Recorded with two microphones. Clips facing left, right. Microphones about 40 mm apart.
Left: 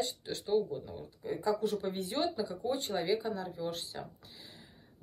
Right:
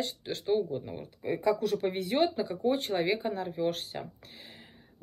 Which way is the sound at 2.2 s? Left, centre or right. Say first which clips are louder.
Right 5 dB; right.